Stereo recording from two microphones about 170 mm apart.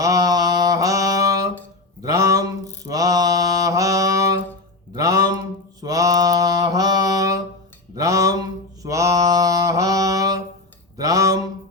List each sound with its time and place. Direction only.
0.0 s mantra: 20° right (ahead or behind)
2.0 s a sound: 20° right (ahead or behind)
2.8 s mantra: 20° right (ahead or behind)